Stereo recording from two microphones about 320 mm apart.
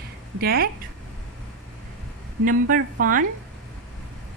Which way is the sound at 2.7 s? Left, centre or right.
Right.